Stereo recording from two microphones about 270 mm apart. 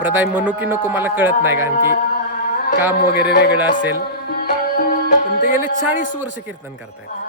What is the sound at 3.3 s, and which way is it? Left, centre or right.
Speech, left.